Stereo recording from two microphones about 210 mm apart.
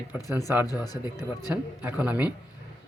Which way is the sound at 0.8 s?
20° left (ahead or behind).